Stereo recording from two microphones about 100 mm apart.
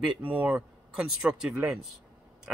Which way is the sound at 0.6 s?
5° right (ahead or behind).